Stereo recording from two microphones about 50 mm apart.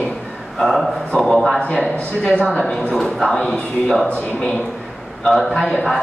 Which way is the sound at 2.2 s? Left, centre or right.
Left.